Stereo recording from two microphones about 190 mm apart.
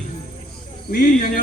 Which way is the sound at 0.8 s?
50° left (ahead or behind).